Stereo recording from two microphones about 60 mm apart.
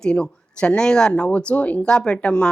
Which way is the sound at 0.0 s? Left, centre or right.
Centre.